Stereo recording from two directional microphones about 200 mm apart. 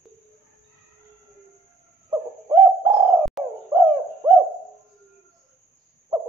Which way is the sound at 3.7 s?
15° right (ahead or behind).